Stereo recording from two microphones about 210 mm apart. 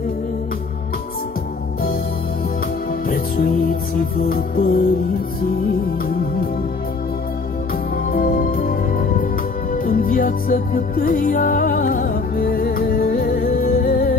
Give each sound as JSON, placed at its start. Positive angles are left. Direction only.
{"t": 4.0, "sound": "music", "side_deg": 40}
{"t": 8.1, "sound": "music", "side_deg": 45}